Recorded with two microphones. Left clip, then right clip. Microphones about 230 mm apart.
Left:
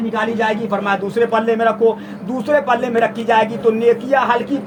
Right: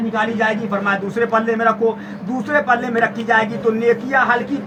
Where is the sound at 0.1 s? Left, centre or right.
Right.